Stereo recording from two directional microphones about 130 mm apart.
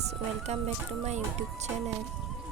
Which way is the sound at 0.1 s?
55° right (ahead or behind).